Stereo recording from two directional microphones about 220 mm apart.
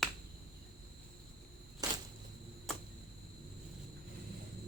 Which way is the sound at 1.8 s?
15° right (ahead or behind).